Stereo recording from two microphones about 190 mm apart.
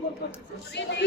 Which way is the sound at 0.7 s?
65° left (ahead or behind).